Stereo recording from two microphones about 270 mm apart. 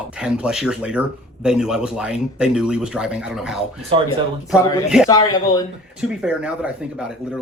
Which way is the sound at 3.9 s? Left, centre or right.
Centre.